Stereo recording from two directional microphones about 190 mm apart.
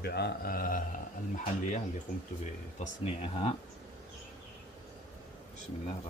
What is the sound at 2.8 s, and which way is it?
Speech, 35° left (ahead or behind).